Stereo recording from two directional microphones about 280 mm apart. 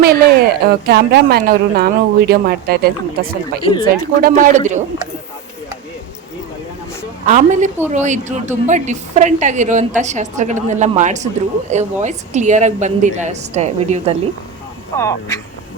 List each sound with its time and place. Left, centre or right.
0.0 s a woman's voice: right
3.6 s speech: centre
4.2 s a woman's voice: right
7.3 s a woman's voice: right
14.9 s speech: centre